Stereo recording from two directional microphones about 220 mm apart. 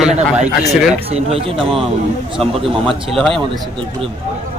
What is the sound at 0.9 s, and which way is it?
Speech, 25° right (ahead or behind).